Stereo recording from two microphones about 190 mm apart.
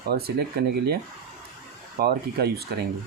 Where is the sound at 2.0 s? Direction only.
55° right (ahead or behind).